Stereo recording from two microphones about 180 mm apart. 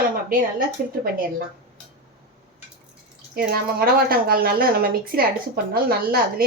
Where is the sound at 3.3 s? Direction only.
60° right (ahead or behind).